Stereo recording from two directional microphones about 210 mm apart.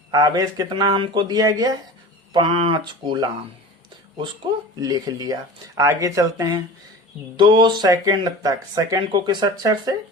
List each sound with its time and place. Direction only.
0.1 s speech: 20° right (ahead or behind)
4.8 s speech: 20° right (ahead or behind)